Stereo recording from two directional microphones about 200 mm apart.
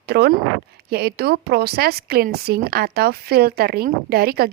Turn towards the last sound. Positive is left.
turn(degrees=-50)  # may be behind; listen again after turning